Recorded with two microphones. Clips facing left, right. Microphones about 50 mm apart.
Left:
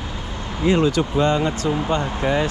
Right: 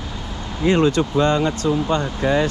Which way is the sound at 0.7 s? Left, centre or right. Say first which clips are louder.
Right 1 dB; right.